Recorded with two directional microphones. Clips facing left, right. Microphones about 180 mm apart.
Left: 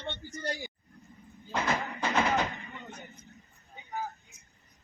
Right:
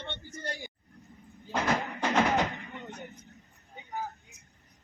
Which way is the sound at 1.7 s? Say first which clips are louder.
Right 3 dB; 45° right (ahead or behind).